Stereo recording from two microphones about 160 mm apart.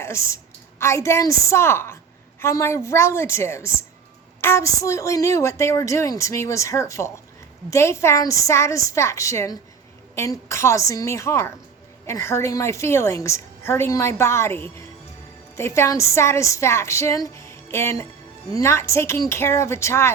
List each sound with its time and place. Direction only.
0.0 s a woman's voice: 15° left (ahead or behind)